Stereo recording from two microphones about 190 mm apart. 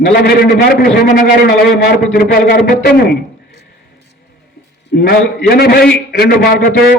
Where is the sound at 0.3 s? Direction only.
55° left (ahead or behind).